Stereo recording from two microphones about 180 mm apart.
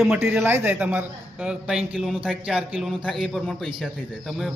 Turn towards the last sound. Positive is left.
turn(degrees=0)  # may be behind; listen again after turning